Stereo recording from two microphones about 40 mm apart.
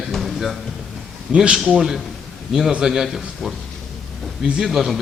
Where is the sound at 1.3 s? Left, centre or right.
Right.